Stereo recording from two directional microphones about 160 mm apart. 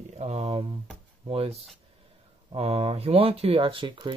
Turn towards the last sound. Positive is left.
turn(degrees=-30)  # may be behind; listen again after turning